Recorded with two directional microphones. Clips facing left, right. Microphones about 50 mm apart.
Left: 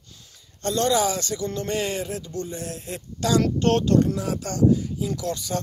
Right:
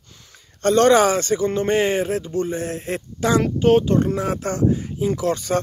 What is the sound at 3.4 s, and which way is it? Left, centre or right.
Speech, centre.